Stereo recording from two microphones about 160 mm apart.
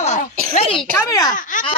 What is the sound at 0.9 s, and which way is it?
Speech, 20° left (ahead or behind).